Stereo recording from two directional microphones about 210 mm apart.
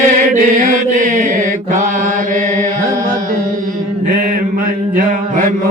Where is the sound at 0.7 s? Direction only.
40° right (ahead or behind).